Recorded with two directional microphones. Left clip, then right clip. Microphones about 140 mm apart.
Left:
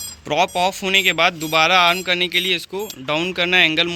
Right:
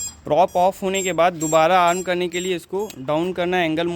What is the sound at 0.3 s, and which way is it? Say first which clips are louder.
Speech: right 2 dB; 45° right (ahead or behind).